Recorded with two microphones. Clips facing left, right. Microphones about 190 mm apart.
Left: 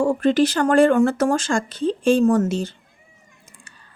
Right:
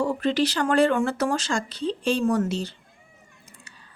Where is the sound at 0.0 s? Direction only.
50° left (ahead or behind).